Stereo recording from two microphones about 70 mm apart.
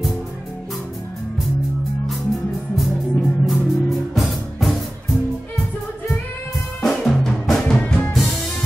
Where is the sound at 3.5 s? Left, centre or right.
Centre.